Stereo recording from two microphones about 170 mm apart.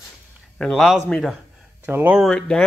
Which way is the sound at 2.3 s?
5° left (ahead or behind).